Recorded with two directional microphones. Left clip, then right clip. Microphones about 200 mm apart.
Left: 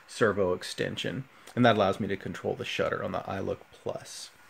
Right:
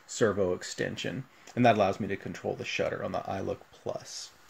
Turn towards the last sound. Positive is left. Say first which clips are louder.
# left 1 dB
turn(degrees=5)  # may be behind; listen again after turning